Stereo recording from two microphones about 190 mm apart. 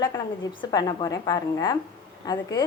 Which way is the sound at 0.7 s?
20° left (ahead or behind).